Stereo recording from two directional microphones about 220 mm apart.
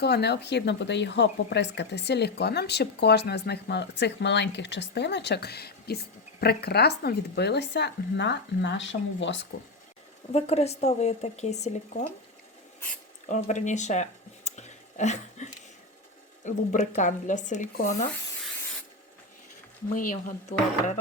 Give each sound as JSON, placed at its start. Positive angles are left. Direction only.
{"t": 0.0, "sound": "speech", "side_deg": 50}
{"t": 10.3, "sound": "speech", "side_deg": 30}
{"t": 13.2, "sound": "speech", "side_deg": 35}
{"t": 20.0, "sound": "speech", "side_deg": 35}